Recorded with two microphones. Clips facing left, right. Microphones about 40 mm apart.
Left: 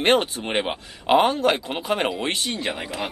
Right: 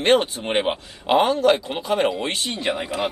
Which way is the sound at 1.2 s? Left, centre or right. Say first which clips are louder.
Right 3 dB; left.